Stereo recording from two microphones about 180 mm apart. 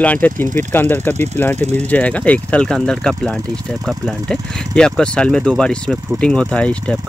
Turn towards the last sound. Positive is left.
turn(degrees=5)  # may be behind; listen again after turning